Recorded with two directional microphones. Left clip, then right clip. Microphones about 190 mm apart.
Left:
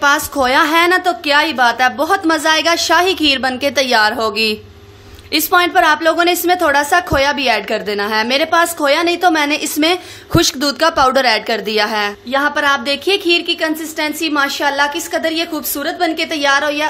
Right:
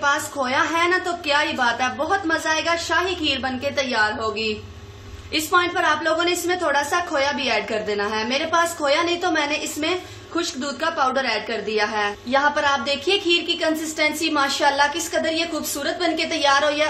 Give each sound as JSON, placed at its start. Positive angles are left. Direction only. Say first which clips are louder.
{"t": 0.0, "sound": "a woman's voice", "louder": "left 8 dB", "side_deg": 50}
{"t": 12.3, "sound": "a woman's voice", "louder": "left 5 dB", "side_deg": 35}